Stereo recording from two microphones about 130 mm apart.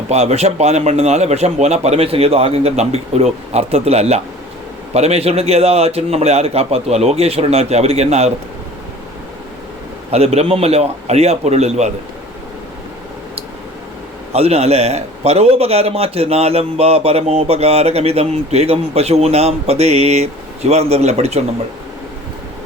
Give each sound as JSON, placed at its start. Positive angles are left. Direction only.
{"t": 0.1, "sound": "a man's voice", "side_deg": -55}
{"t": 10.1, "sound": "a man's voice", "side_deg": -55}
{"t": 14.3, "sound": "a man's voice", "side_deg": -50}